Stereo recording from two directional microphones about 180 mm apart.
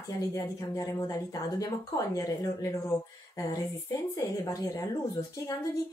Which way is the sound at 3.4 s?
20° left (ahead or behind).